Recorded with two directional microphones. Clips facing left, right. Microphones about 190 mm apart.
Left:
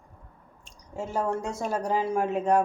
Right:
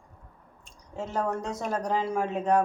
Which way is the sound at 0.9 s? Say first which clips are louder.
Left 1 dB; 10° left (ahead or behind).